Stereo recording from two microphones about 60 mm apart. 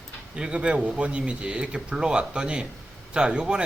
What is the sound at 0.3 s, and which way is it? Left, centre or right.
Speech, centre.